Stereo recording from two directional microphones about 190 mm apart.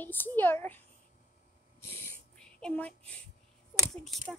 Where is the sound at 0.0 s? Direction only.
10° left (ahead or behind).